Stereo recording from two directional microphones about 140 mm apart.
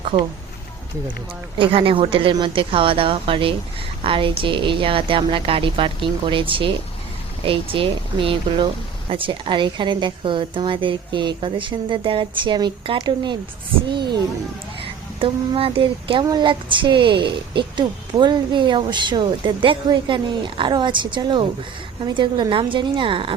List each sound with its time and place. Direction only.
1.5 s a woman's voice: 35° right (ahead or behind)